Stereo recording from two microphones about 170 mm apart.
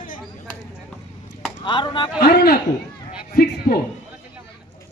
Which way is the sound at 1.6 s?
30° left (ahead or behind).